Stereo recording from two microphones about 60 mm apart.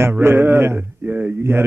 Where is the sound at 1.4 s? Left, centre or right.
Right.